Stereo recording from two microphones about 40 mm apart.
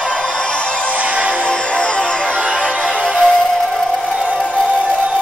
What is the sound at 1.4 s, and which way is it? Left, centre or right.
Music, left.